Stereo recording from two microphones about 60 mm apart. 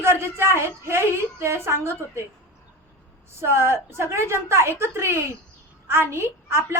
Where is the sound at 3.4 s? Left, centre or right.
Right.